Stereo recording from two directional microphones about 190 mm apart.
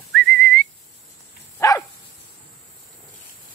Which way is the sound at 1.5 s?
20° left (ahead or behind).